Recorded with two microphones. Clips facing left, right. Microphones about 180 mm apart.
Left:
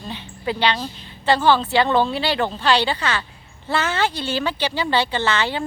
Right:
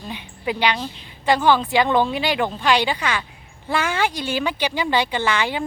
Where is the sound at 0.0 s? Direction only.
10° right (ahead or behind).